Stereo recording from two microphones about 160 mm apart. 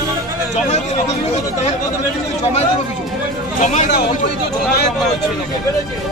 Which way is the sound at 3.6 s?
50° left (ahead or behind).